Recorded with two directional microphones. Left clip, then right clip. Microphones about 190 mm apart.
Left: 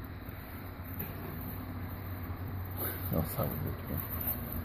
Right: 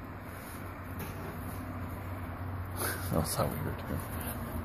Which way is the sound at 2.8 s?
5° right (ahead or behind).